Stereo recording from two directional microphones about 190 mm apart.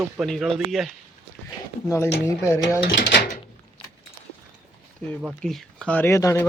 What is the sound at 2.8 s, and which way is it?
Speech, 65° left (ahead or behind).